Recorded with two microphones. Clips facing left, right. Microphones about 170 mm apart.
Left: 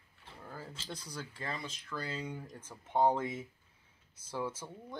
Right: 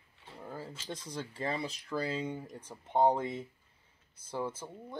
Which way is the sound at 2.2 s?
20° right (ahead or behind).